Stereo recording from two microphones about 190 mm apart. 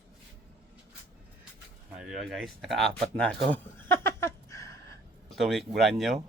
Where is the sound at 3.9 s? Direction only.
15° left (ahead or behind).